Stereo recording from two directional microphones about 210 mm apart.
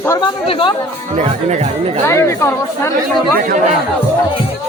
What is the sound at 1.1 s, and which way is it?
Speech, 35° right (ahead or behind).